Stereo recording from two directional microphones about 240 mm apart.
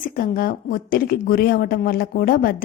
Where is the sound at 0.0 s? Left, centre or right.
Left.